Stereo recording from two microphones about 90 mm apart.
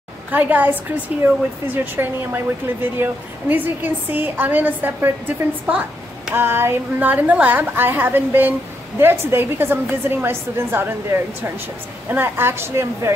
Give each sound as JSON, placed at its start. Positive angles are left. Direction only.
{"t": 0.3, "sound": "a woman's voice", "side_deg": -20}
{"t": 5.7, "sound": "a sound", "side_deg": -15}
{"t": 6.3, "sound": "a woman's voice", "side_deg": -25}